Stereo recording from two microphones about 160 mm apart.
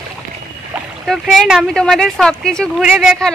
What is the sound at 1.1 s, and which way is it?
Speech, centre (ahead or behind).